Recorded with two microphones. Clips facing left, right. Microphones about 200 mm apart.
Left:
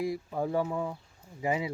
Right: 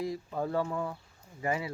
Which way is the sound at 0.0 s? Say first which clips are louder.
Left 2 dB; 10° left (ahead or behind).